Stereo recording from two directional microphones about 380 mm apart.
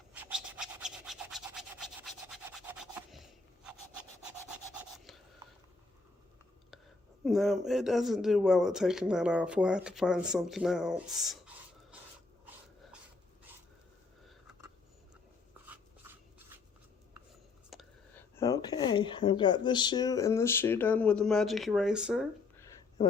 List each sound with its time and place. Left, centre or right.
0.1 s rub: centre
4.8 s rub: centre
7.3 s speech: centre
14.3 s a sound: centre
17.7 s a sound: centre
18.3 s speech: centre